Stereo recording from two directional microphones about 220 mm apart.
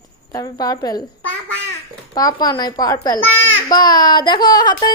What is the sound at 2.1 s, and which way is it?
A woman's voice, 15° left (ahead or behind).